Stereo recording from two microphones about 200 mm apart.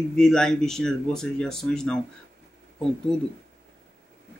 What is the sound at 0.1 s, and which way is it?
Speech, 5° left (ahead or behind).